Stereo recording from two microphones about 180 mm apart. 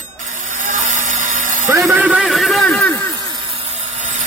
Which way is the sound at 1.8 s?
5° right (ahead or behind).